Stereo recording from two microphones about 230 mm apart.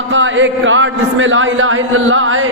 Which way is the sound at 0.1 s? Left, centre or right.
Right.